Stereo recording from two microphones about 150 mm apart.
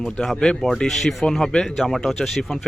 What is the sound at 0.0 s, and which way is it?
Speech, 5° left (ahead or behind).